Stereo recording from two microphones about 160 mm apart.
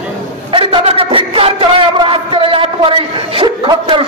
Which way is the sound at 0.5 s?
35° right (ahead or behind).